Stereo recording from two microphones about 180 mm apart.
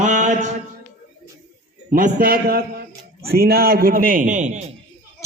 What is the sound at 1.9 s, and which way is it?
A man's voice, 50° right (ahead or behind).